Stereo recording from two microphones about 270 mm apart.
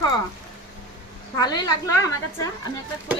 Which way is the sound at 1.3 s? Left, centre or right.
Centre.